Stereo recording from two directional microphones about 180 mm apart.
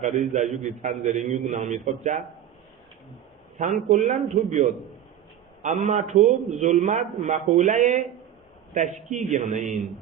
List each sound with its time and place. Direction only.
0.0 s a man's voice: 40° right (ahead or behind)
3.8 s a man's voice: 45° right (ahead or behind)